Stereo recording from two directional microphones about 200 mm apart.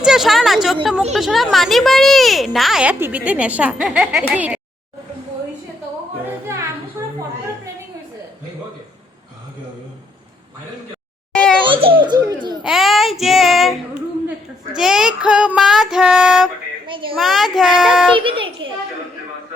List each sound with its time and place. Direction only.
0.0 s speech: centre (ahead or behind)
11.6 s a sound: 25° right (ahead or behind)
12.6 s child singing: centre (ahead or behind)
14.8 s speech: centre (ahead or behind)
16.8 s a child's voice: 25° right (ahead or behind)
17.2 s speech: centre (ahead or behind)
18.1 s a child's voice: 25° right (ahead or behind)